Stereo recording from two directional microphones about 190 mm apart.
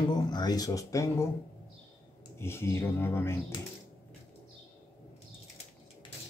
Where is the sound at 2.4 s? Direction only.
15° left (ahead or behind).